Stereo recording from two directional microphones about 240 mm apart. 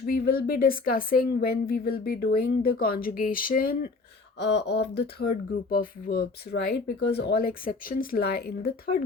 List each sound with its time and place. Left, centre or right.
0.0 s speech: left